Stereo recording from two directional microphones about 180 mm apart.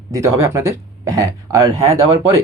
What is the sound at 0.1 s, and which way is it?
Speech, 15° right (ahead or behind).